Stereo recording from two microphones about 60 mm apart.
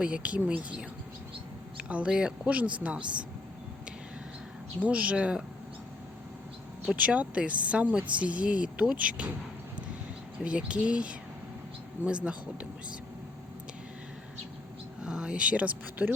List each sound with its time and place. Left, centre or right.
0.0 s speech: right
1.9 s speech: right
4.8 s speech: right
6.9 s speech: right
10.4 s speech: centre
15.0 s speech: centre